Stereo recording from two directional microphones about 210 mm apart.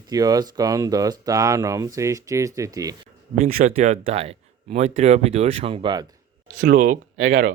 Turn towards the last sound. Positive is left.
turn(degrees=-65)  # may be behind; listen again after turning